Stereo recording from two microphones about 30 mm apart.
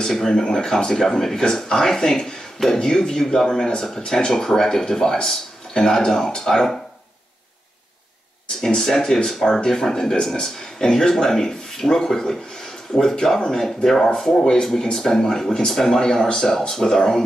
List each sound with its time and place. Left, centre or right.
0.0 s speech: centre
8.5 s speech: centre
13.6 s speech: centre